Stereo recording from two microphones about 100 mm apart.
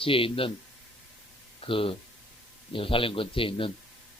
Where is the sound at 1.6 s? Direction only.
65° left (ahead or behind).